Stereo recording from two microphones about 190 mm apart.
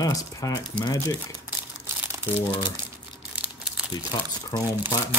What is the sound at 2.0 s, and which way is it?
Crumpling, 10° right (ahead or behind).